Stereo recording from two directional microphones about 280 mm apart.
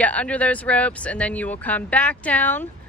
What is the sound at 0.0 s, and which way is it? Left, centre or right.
Speech, centre.